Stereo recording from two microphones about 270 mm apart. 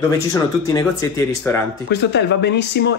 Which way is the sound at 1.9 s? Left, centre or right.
Left.